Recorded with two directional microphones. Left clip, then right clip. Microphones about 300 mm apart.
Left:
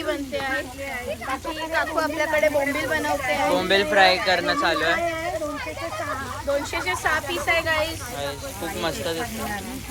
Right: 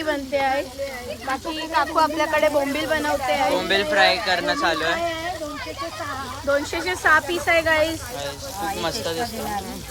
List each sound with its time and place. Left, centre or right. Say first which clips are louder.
0.0 s speech: right 4 dB; right
1.7 s speech: right 4 dB; right
3.5 s speech: left 1 dB; centre
6.5 s speech: right 2 dB; right
8.8 s speech: left 2 dB; centre